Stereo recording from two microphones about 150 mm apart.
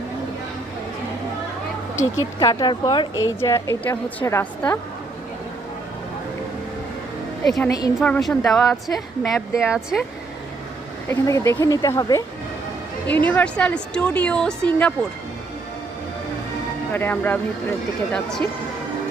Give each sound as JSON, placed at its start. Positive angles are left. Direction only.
{"t": 2.1, "sound": "a woman's voice", "side_deg": 25}
{"t": 7.4, "sound": "speech", "side_deg": 0}
{"t": 11.1, "sound": "a woman's voice", "side_deg": 20}
{"t": 13.1, "sound": "speech", "side_deg": 10}
{"t": 16.9, "sound": "speech", "side_deg": 15}